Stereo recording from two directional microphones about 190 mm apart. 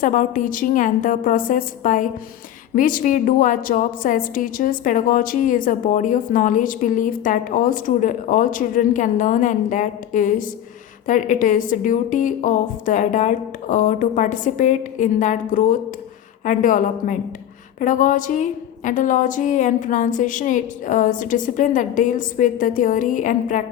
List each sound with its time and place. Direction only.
0.0 s a woman's voice: 40° left (ahead or behind)